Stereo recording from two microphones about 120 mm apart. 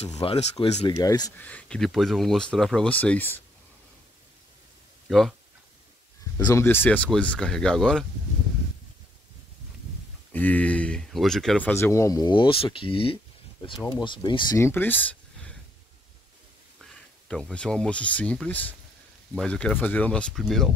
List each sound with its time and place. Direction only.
0.2 s speech: 50° left (ahead or behind)
0.8 s speech: 30° left (ahead or behind)
1.4 s speech: 10° left (ahead or behind)
5.0 s speech: centre (ahead or behind)
6.3 s speech: 25° left (ahead or behind); by 8.1 s 5° left (ahead or behind)
10.3 s speech: 15° left (ahead or behind)
11.7 s speech: 20° left (ahead or behind)
12.2 s speech: 40° left (ahead or behind)
14.6 s speech: 15° left (ahead or behind)
17.3 s speech: 5° left (ahead or behind)